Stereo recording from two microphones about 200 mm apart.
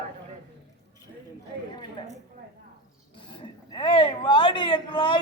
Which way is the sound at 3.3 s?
25° left (ahead or behind).